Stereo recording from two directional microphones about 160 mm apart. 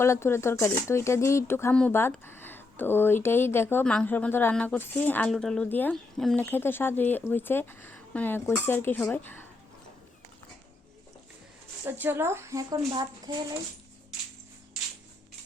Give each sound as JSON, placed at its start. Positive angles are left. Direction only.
{"t": 0.0, "sound": "speech", "side_deg": 15}
{"t": 11.9, "sound": "speech", "side_deg": -15}